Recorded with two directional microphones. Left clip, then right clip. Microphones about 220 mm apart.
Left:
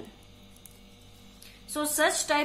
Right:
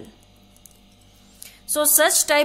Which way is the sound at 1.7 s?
45° right (ahead or behind).